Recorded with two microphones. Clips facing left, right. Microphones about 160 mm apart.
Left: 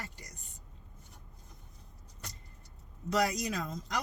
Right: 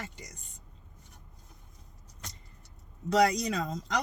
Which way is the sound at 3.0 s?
70° right (ahead or behind).